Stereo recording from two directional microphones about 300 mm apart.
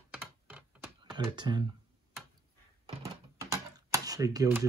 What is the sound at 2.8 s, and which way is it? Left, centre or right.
Door, centre.